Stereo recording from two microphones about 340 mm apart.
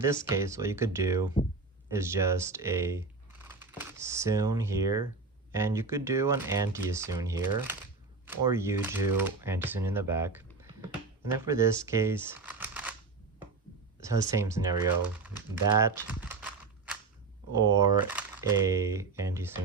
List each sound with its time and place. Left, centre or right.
0.0 s speech: centre
14.0 s speech: centre